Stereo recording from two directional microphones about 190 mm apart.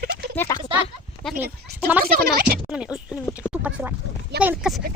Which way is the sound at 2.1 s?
50° right (ahead or behind).